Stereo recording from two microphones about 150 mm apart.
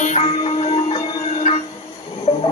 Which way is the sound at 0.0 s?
50° left (ahead or behind).